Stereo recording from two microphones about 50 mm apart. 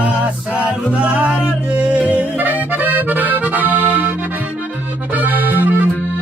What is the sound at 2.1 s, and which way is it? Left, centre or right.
Accordion, right.